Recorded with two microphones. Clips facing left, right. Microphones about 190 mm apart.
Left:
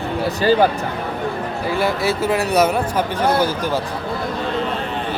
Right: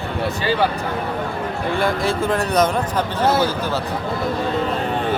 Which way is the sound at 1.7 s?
5° left (ahead or behind).